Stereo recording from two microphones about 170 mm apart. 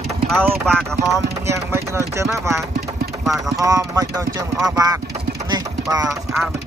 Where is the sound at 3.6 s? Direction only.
20° right (ahead or behind).